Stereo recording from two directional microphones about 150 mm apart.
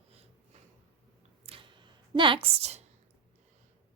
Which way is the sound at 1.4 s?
35° right (ahead or behind).